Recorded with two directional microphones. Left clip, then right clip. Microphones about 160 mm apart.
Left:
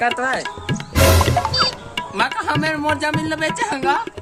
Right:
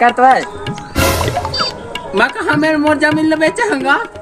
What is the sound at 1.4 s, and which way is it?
Music, centre (ahead or behind).